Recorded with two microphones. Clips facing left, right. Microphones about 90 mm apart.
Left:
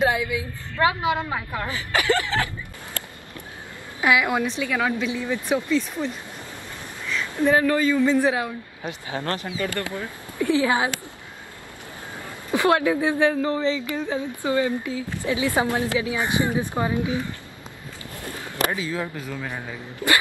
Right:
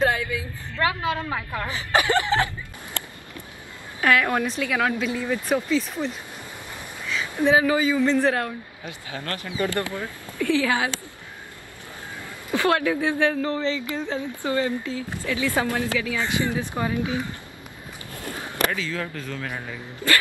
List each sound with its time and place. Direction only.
0.0 s a woman's voice: 10° left (ahead or behind)
0.7 s a woman's voice: 20° left (ahead or behind)
1.7 s speech: 25° right (ahead or behind)
4.0 s a woman's voice: 10° left (ahead or behind); by 8.0 s 10° right (ahead or behind)
8.0 s speech: 5° left (ahead or behind)
8.8 s a woman's voice: 30° left (ahead or behind)
9.6 s speech: 20° right (ahead or behind)
10.0 s speech: 20° left (ahead or behind)
12.4 s a woman's voice: 20° left (ahead or behind)
18.7 s a woman's voice: 20° left (ahead or behind)